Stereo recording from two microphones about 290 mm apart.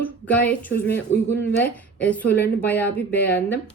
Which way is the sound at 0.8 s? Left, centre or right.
Left.